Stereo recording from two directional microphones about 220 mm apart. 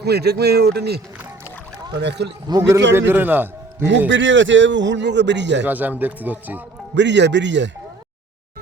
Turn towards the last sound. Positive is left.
turn(degrees=-55)  # may be behind; listen again after turning